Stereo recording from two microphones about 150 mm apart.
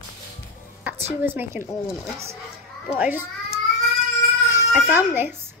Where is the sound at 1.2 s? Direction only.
15° right (ahead or behind).